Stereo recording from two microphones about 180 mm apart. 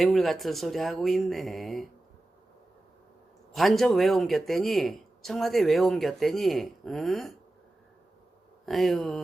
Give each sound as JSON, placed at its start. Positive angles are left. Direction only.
{"t": 0.0, "sound": "a man's voice", "side_deg": 0}
{"t": 3.5, "sound": "a man's voice", "side_deg": 0}
{"t": 8.6, "sound": "a man's voice", "side_deg": 0}